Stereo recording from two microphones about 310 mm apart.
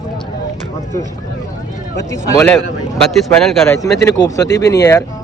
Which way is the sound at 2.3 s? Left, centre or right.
Centre.